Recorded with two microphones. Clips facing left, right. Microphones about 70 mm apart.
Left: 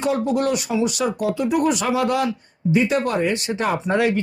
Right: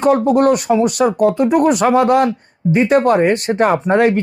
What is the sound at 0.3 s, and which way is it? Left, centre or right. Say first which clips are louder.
Speech: right 9 dB; right.